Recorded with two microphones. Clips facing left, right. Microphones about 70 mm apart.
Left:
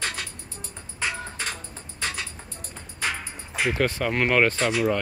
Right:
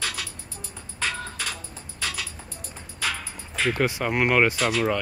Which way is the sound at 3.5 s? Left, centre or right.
Centre.